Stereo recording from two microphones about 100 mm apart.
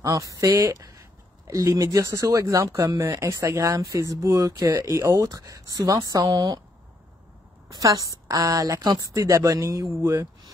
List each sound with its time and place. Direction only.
0.0 s speech: 35° right (ahead or behind)
7.8 s speech: 35° right (ahead or behind)